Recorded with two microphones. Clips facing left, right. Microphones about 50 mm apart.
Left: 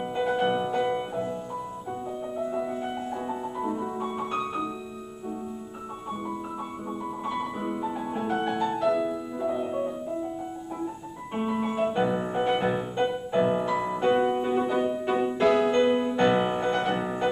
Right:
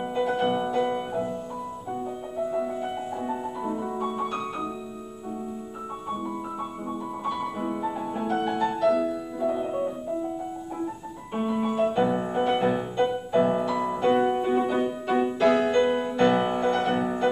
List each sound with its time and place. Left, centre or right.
0.1 s music: centre
2.3 s music: centre
7.2 s music: centre
11.3 s music: centre